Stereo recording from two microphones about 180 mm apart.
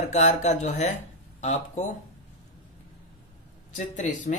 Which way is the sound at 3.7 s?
40° left (ahead or behind).